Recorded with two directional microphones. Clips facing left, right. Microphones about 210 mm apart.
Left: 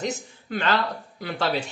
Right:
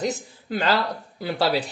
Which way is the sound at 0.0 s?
35° right (ahead or behind).